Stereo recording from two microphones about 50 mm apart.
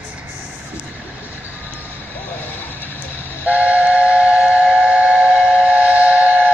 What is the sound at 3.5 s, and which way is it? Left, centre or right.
Train, right.